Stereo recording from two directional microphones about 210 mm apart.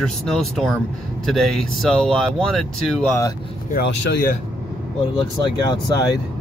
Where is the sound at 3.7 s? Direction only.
45° left (ahead or behind).